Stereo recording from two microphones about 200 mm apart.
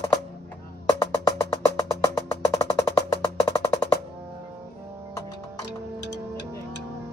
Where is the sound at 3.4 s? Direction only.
15° left (ahead or behind).